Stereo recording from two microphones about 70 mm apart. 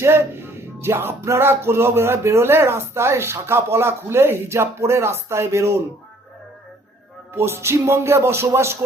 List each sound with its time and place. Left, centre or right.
0.0 s speech: right
7.3 s speech: right